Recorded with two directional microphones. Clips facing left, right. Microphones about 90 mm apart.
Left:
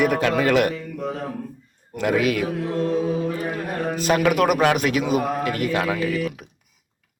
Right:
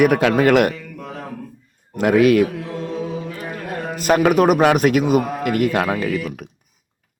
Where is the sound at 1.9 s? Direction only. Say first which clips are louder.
Right 7 dB; 50° right (ahead or behind).